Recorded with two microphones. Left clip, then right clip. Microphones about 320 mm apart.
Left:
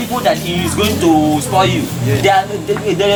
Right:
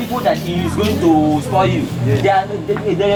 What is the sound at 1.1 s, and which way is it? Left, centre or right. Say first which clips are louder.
Speech: left 1 dB; right.